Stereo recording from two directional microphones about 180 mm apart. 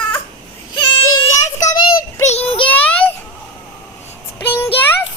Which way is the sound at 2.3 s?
35° left (ahead or behind).